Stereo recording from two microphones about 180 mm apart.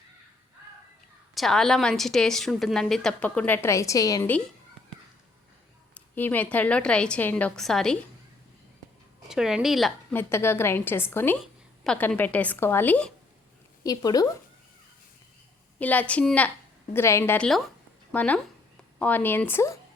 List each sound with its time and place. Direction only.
1.4 s a woman's voice: centre (ahead or behind)
5.9 s a woman's voice: 10° left (ahead or behind)
9.3 s a woman's voice: 5° right (ahead or behind)
10.2 s a woman's voice: 15° left (ahead or behind)
13.8 s speech: 20° left (ahead or behind)
15.8 s a woman's voice: 10° left (ahead or behind)